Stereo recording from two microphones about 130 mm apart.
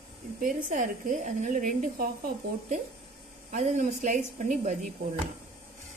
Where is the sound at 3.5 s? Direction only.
70° right (ahead or behind).